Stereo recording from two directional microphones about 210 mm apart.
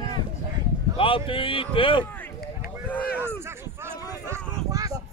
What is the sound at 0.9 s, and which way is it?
Speech, 25° left (ahead or behind).